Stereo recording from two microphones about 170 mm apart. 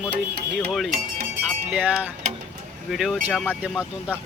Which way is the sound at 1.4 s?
5° right (ahead or behind).